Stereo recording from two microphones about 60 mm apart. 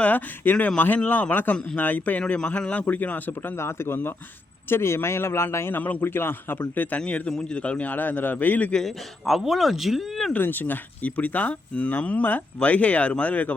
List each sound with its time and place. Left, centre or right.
0.0 s speech: left
3.5 s speech: left
5.8 s a man's voice: left
7.0 s speech: centre
8.7 s speech: centre
10.3 s speech: left